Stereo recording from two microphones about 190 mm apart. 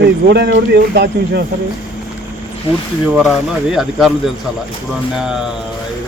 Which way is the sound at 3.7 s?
Centre (ahead or behind).